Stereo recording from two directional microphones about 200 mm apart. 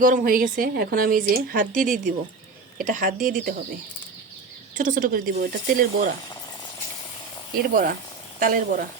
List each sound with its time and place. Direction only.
0.0 s a woman's voice: 40° right (ahead or behind)
4.8 s a woman's voice: 40° right (ahead or behind)
7.7 s a woman's voice: 45° right (ahead or behind)